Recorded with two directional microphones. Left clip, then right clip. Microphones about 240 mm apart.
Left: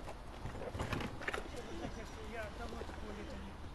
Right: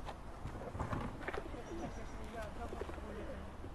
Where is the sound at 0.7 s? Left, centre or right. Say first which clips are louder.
Even; left.